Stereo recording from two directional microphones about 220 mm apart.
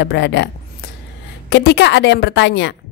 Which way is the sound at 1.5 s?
50° left (ahead or behind).